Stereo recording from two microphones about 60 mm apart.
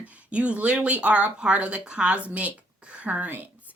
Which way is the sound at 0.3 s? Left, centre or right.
Right.